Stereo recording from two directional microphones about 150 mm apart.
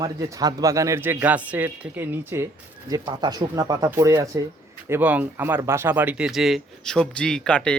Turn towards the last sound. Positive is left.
turn(degrees=5)  # may be behind; listen again after turning